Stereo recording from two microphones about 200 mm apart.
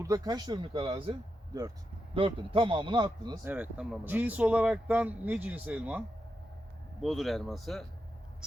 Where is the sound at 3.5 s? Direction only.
5° right (ahead or behind).